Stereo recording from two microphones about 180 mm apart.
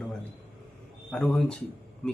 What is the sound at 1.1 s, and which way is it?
Speech, 5° left (ahead or behind).